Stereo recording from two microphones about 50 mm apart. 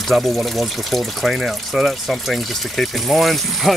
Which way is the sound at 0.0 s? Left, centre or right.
Centre.